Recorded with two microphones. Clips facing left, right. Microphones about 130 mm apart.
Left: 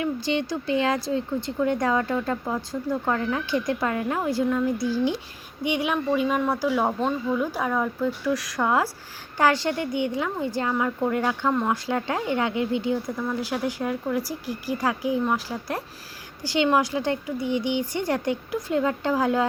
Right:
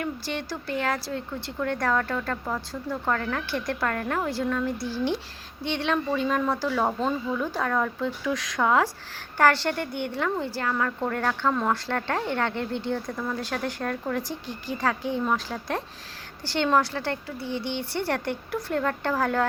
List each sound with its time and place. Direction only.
0.0 s speech: 15° left (ahead or behind)